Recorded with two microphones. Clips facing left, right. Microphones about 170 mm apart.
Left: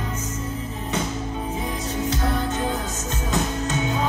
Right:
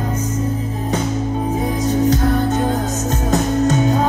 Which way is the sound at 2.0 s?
40° right (ahead or behind).